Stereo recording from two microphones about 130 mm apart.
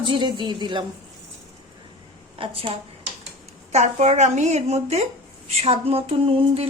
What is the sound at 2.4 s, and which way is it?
Speech, 45° right (ahead or behind).